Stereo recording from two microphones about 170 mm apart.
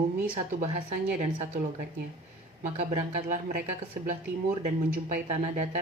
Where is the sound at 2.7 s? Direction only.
40° right (ahead or behind).